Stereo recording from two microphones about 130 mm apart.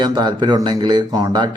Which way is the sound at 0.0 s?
35° right (ahead or behind).